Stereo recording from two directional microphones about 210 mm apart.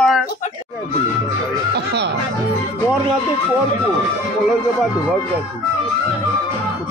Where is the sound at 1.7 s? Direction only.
50° right (ahead or behind).